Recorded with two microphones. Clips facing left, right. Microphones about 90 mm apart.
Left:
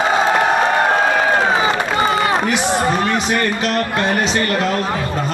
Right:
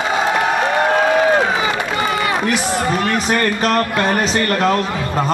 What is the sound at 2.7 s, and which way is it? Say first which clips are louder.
Speech: left 1 dB; 30° left (ahead or behind).